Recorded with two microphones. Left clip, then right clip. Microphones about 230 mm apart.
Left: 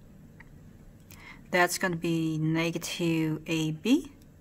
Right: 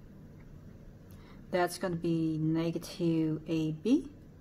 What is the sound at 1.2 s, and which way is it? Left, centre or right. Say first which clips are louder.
A woman's voice: left 6 dB; left.